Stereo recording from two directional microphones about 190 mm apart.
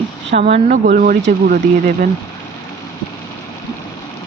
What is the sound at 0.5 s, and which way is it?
Speech, 45° right (ahead or behind).